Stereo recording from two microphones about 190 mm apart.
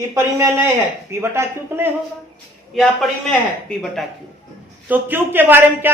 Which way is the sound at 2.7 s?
Centre (ahead or behind).